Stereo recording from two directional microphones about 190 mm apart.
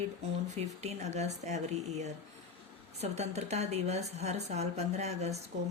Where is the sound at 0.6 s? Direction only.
35° right (ahead or behind).